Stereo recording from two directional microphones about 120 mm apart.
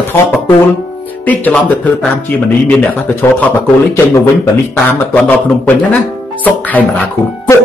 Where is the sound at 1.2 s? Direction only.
15° left (ahead or behind).